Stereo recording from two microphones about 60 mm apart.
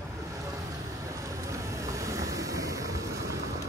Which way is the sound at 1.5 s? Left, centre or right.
Right.